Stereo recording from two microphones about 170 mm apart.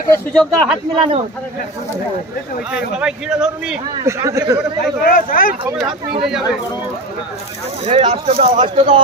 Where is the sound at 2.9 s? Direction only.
5° right (ahead or behind).